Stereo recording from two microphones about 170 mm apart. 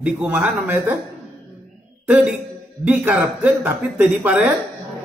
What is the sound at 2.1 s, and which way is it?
Speech, 10° right (ahead or behind).